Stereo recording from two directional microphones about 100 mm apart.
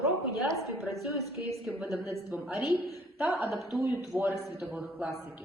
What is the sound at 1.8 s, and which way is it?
Speech, 30° right (ahead or behind).